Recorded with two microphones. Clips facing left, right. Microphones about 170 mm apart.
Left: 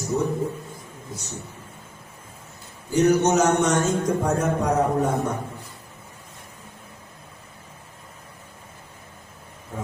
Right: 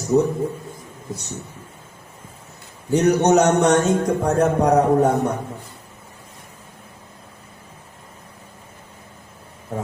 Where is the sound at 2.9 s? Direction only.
65° right (ahead or behind).